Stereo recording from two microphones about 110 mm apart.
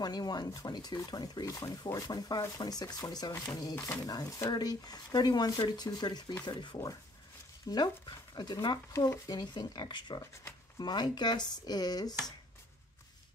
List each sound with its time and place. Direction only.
0.0 s speech: 40° left (ahead or behind)